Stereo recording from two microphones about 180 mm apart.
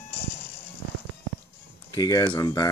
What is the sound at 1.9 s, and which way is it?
Speech, 20° left (ahead or behind).